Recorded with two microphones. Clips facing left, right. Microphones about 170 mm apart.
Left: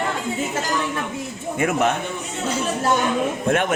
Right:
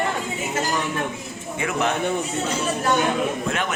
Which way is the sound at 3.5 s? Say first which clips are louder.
Left 6 dB; 50° left (ahead or behind).